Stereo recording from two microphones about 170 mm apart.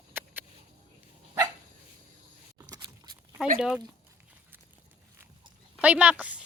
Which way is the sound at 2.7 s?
25° right (ahead or behind).